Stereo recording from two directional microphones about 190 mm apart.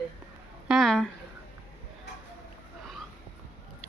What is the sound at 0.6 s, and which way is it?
Speech, centre (ahead or behind).